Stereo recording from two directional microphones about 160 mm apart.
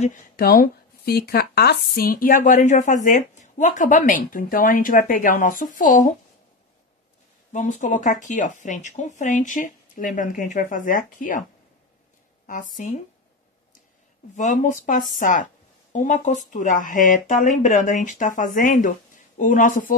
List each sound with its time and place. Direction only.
0.4 s speech: 70° left (ahead or behind)
7.5 s speech: 50° left (ahead or behind)
12.4 s speech: 55° left (ahead or behind)
14.3 s speech: 50° left (ahead or behind)